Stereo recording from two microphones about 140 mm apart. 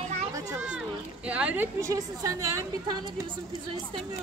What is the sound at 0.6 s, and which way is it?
Speech, 10° right (ahead or behind).